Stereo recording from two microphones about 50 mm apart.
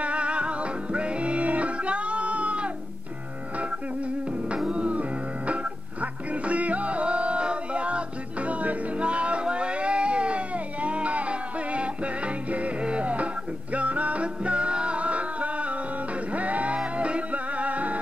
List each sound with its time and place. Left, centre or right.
0.0 s music: right
4.6 s music: right